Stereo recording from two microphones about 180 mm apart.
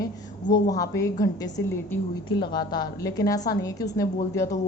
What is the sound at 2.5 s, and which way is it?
A woman's voice, 25° left (ahead or behind).